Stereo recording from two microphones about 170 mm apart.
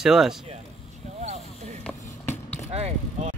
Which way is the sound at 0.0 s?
Centre (ahead or behind).